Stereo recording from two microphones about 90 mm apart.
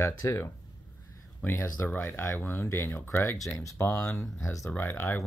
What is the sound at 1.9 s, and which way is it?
Speech, 25° left (ahead or behind).